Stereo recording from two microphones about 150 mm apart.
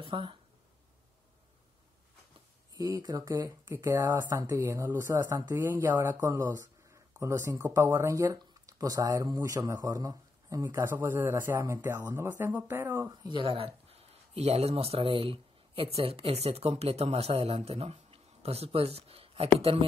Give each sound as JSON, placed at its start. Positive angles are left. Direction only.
{"t": 0.0, "sound": "speech", "side_deg": -35}
{"t": 2.8, "sound": "speech", "side_deg": -25}